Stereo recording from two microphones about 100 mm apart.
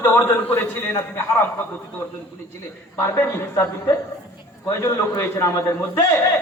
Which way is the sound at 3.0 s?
30° left (ahead or behind).